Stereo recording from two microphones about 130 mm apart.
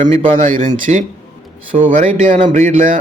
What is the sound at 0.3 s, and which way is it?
A man's voice, 90° right.